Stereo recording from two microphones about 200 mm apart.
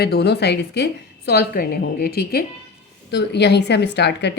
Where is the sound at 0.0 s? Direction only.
55° left (ahead or behind).